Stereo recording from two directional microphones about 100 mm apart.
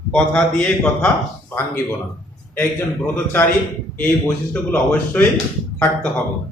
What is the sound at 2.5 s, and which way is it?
Speech, 20° left (ahead or behind).